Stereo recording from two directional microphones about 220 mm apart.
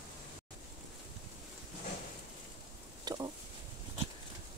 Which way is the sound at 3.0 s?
15° right (ahead or behind).